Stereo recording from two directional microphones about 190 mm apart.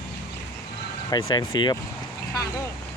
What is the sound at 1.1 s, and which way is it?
Speech, 20° left (ahead or behind).